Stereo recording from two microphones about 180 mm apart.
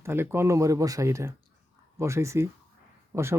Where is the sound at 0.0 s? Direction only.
15° right (ahead or behind).